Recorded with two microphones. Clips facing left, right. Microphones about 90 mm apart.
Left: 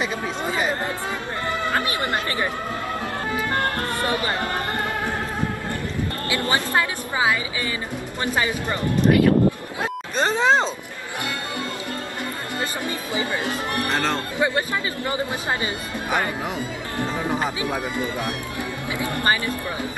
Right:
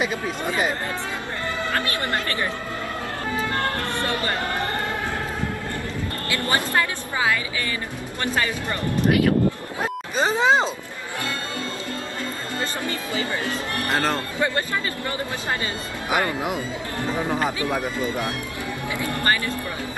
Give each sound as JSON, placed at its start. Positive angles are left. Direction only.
{"t": 1.7, "sound": "a woman's voice", "side_deg": 20}
{"t": 4.0, "sound": "speech", "side_deg": 20}
{"t": 6.3, "sound": "a woman's voice", "side_deg": 20}
{"t": 9.8, "sound": "speech", "side_deg": -5}
{"t": 12.5, "sound": "a woman's voice", "side_deg": 20}
{"t": 13.8, "sound": "speech", "side_deg": -10}
{"t": 14.4, "sound": "a woman's voice", "side_deg": 15}
{"t": 17.3, "sound": "speech", "side_deg": 15}
{"t": 18.9, "sound": "a woman's voice", "side_deg": 20}